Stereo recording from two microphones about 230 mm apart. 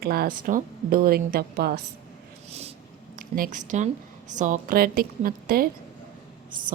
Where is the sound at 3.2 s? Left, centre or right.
Right.